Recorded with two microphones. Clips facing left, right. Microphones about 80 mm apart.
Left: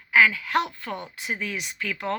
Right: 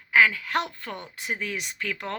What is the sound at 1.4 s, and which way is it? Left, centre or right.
Speech, right.